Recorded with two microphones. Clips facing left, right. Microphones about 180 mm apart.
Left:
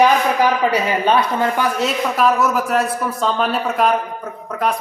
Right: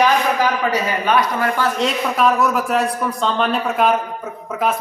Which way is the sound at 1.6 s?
5° left (ahead or behind).